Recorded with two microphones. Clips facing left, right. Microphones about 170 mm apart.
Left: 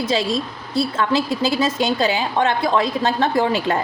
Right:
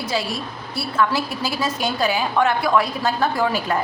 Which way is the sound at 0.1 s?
20° left (ahead or behind).